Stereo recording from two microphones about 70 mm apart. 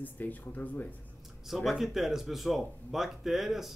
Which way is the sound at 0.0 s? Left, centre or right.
Left.